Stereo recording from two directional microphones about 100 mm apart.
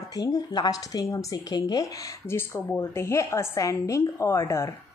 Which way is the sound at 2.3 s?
25° left (ahead or behind).